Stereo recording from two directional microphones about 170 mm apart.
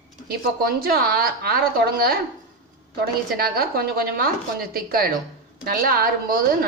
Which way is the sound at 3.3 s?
65° right (ahead or behind).